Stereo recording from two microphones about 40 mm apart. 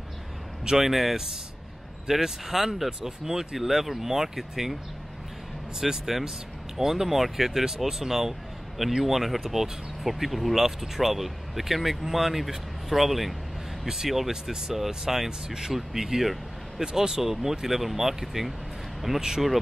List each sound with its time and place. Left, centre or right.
0.7 s speech: centre
3.5 s speech: centre
5.8 s speech: centre
16.8 s speech: centre